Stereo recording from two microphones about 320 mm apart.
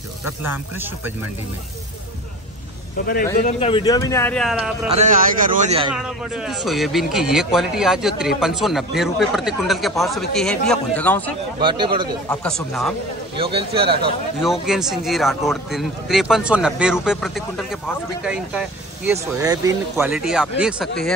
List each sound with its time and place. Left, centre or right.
3.4 s speech: centre
4.9 s a man's voice: right
5.9 s speech: centre
11.6 s a man's voice: centre
12.3 s speech: centre
13.4 s a man's voice: centre
14.4 s speech: centre